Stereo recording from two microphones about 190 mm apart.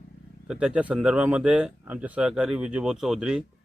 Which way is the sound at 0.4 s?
5° right (ahead or behind).